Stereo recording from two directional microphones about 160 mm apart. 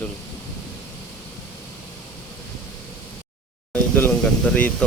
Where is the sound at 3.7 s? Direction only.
10° left (ahead or behind).